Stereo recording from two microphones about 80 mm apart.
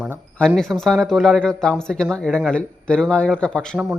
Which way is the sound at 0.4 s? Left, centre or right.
Centre.